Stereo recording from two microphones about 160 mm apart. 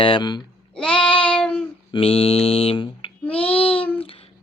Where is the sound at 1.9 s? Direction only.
35° left (ahead or behind).